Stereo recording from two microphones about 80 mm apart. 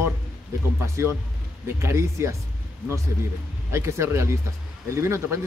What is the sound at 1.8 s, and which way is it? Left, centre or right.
Speech, right.